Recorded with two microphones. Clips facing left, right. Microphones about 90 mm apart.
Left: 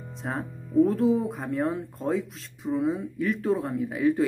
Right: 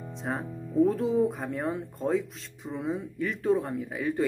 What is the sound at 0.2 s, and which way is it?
Speech, centre (ahead or behind).